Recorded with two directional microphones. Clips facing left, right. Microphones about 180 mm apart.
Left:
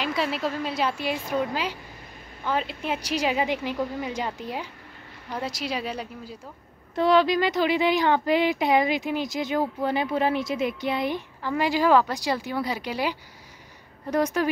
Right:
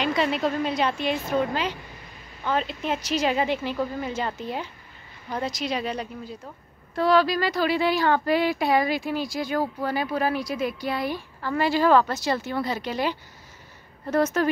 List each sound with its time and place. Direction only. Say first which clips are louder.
0.0 s speech: right 3 dB; 5° left (ahead or behind)
7.0 s speech: left 1 dB; 20° left (ahead or behind)